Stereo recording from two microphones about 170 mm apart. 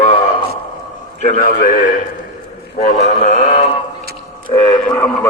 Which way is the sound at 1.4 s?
55° left (ahead or behind).